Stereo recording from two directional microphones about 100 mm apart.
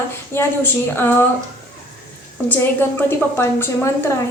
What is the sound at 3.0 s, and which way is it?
A woman's voice, 20° left (ahead or behind).